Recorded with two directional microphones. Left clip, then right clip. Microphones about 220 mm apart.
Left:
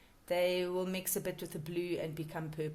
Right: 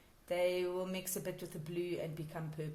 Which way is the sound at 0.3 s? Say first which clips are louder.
Left 2 dB; 40° left (ahead or behind).